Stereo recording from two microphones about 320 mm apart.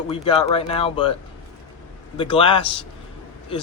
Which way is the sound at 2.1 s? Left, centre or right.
Centre.